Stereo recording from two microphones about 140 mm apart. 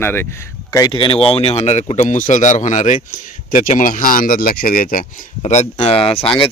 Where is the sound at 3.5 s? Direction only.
70° left (ahead or behind).